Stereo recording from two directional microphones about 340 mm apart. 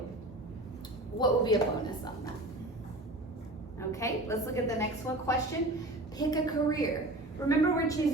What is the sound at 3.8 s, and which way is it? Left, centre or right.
A woman's voice, centre.